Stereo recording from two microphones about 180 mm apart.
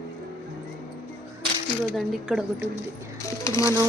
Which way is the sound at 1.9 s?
5° right (ahead or behind).